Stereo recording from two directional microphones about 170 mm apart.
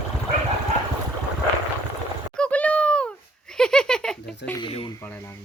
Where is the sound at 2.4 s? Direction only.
10° left (ahead or behind).